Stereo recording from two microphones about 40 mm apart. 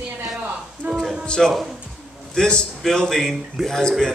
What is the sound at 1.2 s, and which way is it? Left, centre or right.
Speech, left.